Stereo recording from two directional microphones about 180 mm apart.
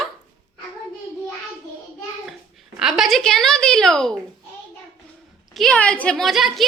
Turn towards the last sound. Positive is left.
turn(degrees=0)  # may be behind; listen again after turning